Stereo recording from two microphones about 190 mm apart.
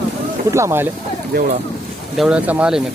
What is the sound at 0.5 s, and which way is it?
Speech, 15° right (ahead or behind).